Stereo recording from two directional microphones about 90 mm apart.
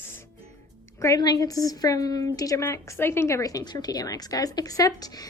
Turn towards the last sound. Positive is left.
turn(degrees=45)  # may be behind; listen again after turning